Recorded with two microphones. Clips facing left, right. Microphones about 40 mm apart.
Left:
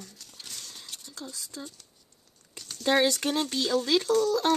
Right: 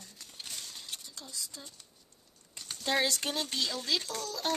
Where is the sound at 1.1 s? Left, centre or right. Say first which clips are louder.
Left 4 dB; left.